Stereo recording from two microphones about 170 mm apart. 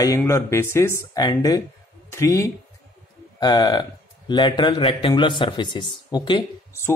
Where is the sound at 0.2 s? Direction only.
15° left (ahead or behind).